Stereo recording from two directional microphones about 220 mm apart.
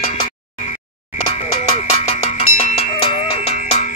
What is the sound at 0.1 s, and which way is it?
Music, 30° left (ahead or behind).